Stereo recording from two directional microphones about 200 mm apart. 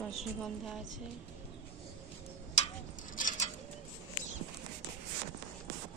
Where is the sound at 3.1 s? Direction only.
40° left (ahead or behind).